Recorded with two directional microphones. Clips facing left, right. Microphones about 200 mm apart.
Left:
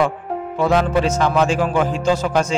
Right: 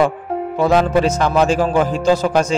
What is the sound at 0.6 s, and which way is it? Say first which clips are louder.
A man's voice: right 2 dB; 35° right (ahead or behind).